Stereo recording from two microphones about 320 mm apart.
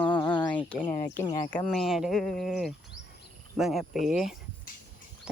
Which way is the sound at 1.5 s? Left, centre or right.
Centre.